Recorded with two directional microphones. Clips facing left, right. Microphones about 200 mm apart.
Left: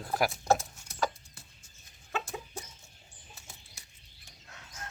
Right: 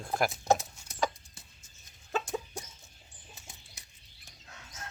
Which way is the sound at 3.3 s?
15° right (ahead or behind).